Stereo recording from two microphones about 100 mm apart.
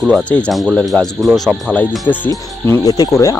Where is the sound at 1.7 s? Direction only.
15° left (ahead or behind).